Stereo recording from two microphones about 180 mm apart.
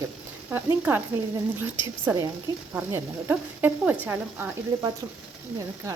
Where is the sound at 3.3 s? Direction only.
10° right (ahead or behind).